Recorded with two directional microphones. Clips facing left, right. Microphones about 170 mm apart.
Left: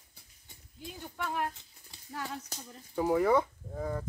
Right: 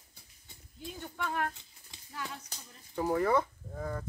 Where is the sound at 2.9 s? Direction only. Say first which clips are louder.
Left 2 dB; 10° left (ahead or behind).